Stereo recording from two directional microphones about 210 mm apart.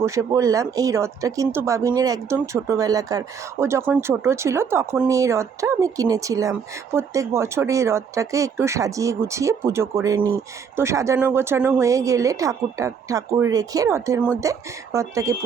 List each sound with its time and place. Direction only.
0.0 s speech: 15° right (ahead or behind)